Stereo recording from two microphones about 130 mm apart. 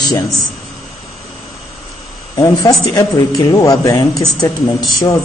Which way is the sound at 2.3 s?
25° left (ahead or behind).